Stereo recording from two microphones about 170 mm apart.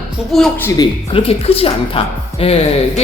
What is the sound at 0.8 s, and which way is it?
A woman's voice, 35° left (ahead or behind).